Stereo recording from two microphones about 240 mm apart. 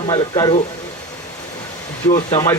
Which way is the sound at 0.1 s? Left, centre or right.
Centre.